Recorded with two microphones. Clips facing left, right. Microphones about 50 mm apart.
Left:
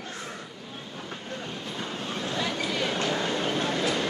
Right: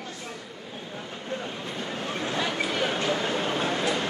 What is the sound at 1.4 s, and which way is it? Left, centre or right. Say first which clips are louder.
Vehicle: right 1 dB; right.